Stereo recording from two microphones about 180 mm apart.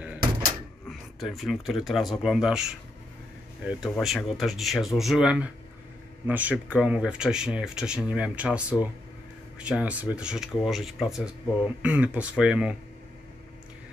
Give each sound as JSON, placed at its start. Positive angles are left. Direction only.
{"t": 0.8, "sound": "speech", "side_deg": 0}
{"t": 3.9, "sound": "speech", "side_deg": 0}